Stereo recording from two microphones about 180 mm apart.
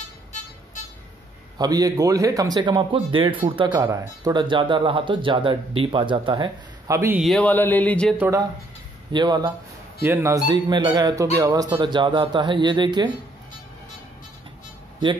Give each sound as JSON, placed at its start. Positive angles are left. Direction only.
{"t": 1.6, "sound": "speech", "side_deg": -20}
{"t": 7.2, "sound": "speech", "side_deg": 0}
{"t": 8.2, "sound": "speech", "side_deg": -20}